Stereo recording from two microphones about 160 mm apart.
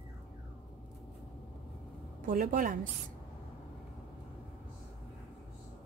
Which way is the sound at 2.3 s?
60° right (ahead or behind).